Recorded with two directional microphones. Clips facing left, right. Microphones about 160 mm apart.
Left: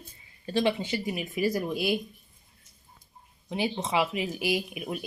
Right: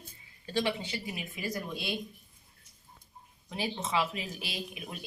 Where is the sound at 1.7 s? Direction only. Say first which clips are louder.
Left 8 dB; 25° right (ahead or behind).